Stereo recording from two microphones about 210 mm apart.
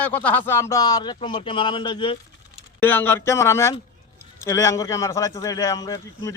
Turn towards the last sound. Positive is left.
turn(degrees=15)  # may be behind; listen again after turning